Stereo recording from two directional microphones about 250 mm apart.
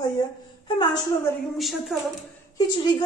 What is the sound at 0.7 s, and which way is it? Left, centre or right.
Speech, centre.